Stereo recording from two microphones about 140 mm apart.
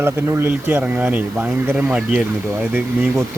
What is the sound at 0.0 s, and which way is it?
Speech, 20° right (ahead or behind).